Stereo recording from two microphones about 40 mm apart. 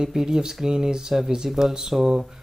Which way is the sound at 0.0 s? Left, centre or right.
Centre.